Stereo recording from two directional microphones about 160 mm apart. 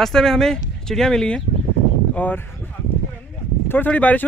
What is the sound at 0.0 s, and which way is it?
Speech, 5° left (ahead or behind).